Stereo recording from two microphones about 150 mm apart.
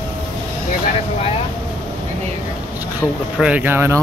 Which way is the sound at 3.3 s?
10° right (ahead or behind).